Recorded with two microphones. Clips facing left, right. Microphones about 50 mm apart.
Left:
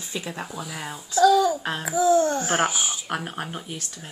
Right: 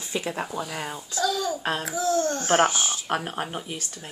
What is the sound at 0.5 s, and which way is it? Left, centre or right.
Speech, centre.